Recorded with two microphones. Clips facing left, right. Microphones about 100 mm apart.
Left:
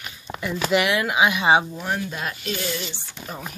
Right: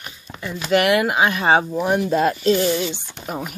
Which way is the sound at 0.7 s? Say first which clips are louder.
Right 5 dB; 50° right (ahead or behind).